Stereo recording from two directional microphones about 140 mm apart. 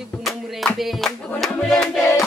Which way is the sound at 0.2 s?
Centre (ahead or behind).